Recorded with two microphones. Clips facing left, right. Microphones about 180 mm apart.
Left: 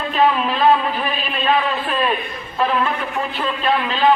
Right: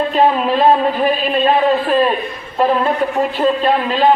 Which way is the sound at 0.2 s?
35° right (ahead or behind).